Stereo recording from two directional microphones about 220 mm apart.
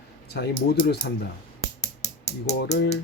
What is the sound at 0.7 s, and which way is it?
Speech, 50° left (ahead or behind).